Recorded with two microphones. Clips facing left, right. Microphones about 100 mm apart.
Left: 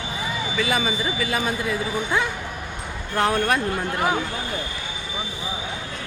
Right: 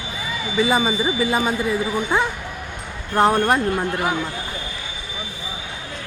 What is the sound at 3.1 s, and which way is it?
Speech, 20° right (ahead or behind).